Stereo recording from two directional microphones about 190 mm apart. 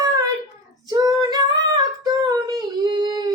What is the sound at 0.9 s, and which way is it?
Singing, 20° right (ahead or behind).